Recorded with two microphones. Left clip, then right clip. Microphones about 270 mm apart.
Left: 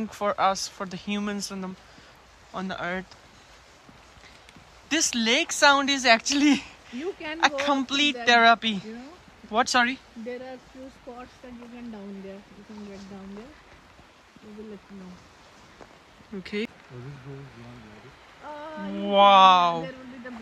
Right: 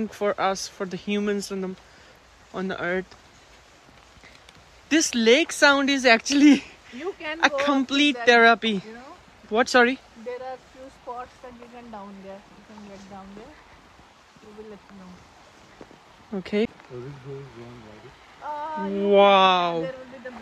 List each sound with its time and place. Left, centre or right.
0.1 s speech: centre
4.8 s speech: centre
16.4 s speech: centre
19.0 s speech: centre